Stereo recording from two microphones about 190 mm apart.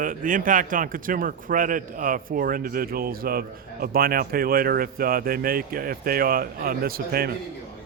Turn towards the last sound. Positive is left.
turn(degrees=-50)  # may be behind; listen again after turning